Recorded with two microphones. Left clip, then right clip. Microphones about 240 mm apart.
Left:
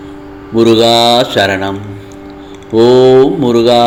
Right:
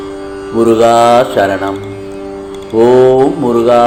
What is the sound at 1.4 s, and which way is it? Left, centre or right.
Speech, left.